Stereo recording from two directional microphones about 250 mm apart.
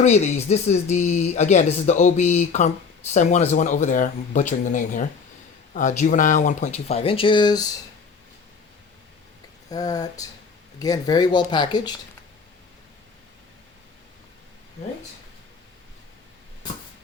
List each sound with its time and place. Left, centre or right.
0.0 s speech: left
9.6 s speech: centre